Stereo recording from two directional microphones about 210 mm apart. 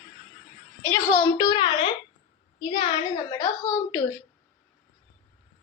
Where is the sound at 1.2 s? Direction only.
15° left (ahead or behind).